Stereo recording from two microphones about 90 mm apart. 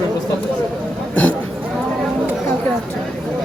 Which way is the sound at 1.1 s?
20° left (ahead or behind).